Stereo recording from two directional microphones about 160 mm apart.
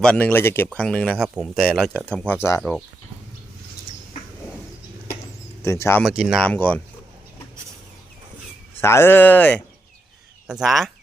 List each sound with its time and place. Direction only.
0.0 s speech: 10° left (ahead or behind)
5.6 s speech: 15° left (ahead or behind)
6.0 s speech: centre (ahead or behind)
8.8 s speech: 15° left (ahead or behind)
10.4 s speech: 5° right (ahead or behind)